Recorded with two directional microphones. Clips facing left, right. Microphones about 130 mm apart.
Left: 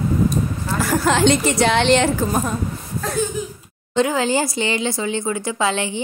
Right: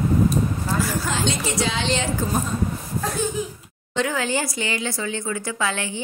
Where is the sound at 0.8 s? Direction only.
70° left (ahead or behind).